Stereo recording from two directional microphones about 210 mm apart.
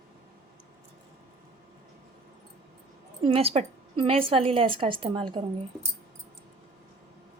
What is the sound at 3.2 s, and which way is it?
A woman's voice, 25° right (ahead or behind).